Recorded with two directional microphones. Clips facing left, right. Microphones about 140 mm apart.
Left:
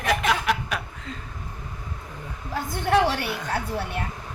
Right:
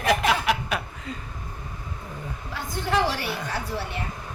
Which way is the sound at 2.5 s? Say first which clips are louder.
Left 4 dB; 55° left (ahead or behind).